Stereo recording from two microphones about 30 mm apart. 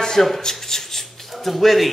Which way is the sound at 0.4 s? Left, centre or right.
Centre.